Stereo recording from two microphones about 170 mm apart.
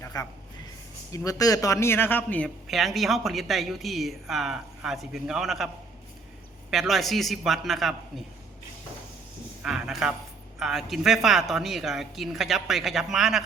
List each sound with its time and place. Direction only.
0.0 s a sound: 20° left (ahead or behind)
1.1 s speech: 20° left (ahead or behind)
2.6 s speech: centre (ahead or behind)
6.7 s speech: centre (ahead or behind)
9.6 s speech: centre (ahead or behind)